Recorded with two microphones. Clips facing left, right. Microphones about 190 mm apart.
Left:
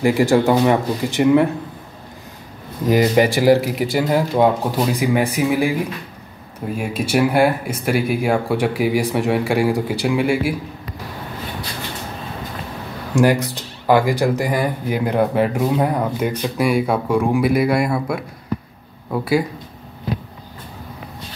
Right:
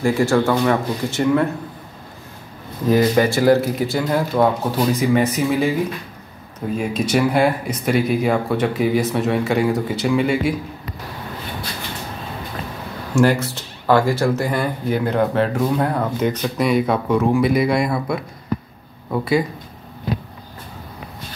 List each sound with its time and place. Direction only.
0.0 s speech: 15° left (ahead or behind)
2.9 s speech: 15° left (ahead or behind)
6.8 s speech: 5° left (ahead or behind)
13.1 s speech: 15° left (ahead or behind)